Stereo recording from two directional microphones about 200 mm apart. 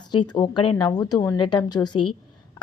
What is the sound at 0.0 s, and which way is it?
Speech, 20° left (ahead or behind).